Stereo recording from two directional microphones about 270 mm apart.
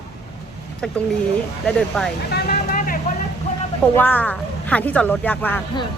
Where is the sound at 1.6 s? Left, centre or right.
Centre.